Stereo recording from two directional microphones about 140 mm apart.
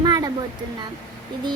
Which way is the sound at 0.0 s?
30° right (ahead or behind).